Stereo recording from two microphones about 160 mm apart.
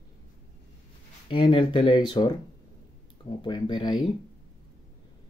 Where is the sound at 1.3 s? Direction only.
30° left (ahead or behind).